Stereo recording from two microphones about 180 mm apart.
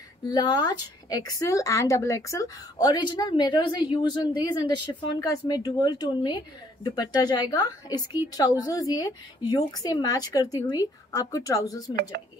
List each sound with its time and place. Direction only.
0.3 s speech: 25° left (ahead or behind)